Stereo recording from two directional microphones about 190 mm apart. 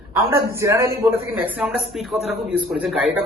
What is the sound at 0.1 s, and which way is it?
A man's voice, 15° right (ahead or behind).